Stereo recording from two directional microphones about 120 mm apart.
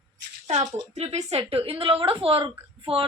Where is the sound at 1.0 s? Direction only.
60° right (ahead or behind).